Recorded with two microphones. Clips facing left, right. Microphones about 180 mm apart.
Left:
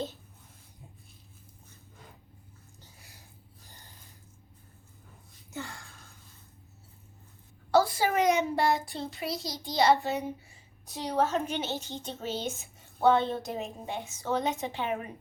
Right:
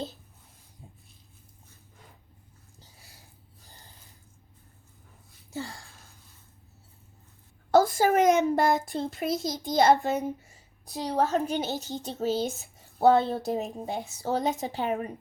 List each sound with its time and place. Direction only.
5.5 s a sound: 30° right (ahead or behind)
7.7 s a child's voice: 45° right (ahead or behind)
10.8 s a woman's voice: 35° right (ahead or behind)